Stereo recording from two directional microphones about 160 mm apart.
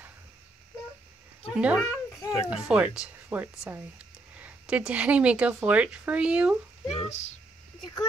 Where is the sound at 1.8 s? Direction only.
20° left (ahead or behind).